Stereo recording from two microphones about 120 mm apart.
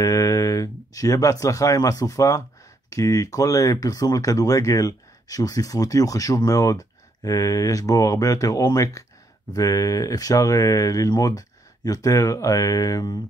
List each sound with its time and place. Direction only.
0.0 s speech: 25° left (ahead or behind)